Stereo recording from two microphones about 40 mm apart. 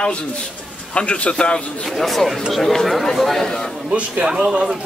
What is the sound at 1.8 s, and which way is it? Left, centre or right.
A man's voice, centre.